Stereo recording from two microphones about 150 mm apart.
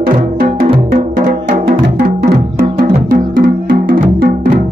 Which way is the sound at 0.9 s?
60° right (ahead or behind).